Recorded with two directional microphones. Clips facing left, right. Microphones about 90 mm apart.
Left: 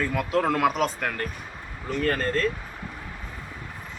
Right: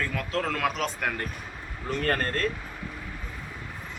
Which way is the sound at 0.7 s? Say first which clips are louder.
Left 4 dB; 5° left (ahead or behind).